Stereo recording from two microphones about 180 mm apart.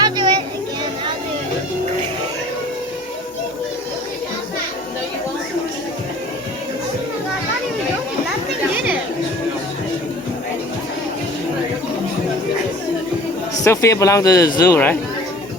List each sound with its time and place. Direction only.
0.0 s a sound: 25° right (ahead or behind)
8.7 s chatter: 10° right (ahead or behind)
13.7 s speech: 15° left (ahead or behind)